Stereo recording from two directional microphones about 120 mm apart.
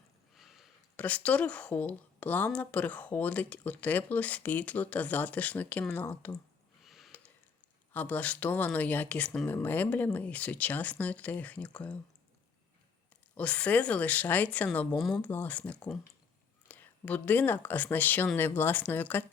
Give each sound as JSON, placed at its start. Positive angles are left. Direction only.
{"t": 0.3, "sound": "a sound", "side_deg": 0}
{"t": 0.9, "sound": "speech", "side_deg": 10}
{"t": 6.8, "sound": "a sound", "side_deg": 0}
{"t": 7.9, "sound": "speech", "side_deg": 15}
{"t": 13.3, "sound": "speech", "side_deg": 10}
{"t": 15.3, "sound": "speech", "side_deg": 15}